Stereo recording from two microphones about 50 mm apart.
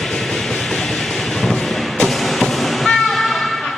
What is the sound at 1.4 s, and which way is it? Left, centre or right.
Train, centre.